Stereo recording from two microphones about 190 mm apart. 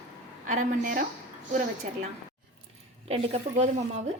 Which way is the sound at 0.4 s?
40° right (ahead or behind).